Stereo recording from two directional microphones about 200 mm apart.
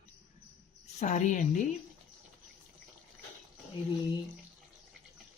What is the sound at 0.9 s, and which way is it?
Speech, 35° left (ahead or behind).